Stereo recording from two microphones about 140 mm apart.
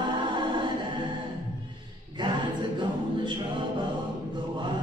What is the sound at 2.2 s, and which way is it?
A capella, 35° right (ahead or behind).